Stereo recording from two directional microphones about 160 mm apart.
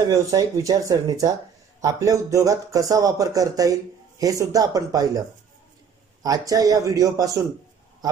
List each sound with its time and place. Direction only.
0.1 s a man's voice: 25° right (ahead or behind)
6.2 s a man's voice: 20° right (ahead or behind)